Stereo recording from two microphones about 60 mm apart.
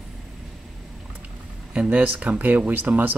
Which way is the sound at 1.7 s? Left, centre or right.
Right.